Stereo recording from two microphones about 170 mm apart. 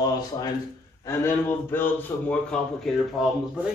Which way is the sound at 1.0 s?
15° left (ahead or behind).